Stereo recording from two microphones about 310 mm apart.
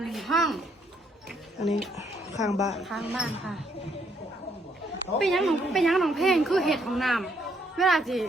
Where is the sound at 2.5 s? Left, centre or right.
Left.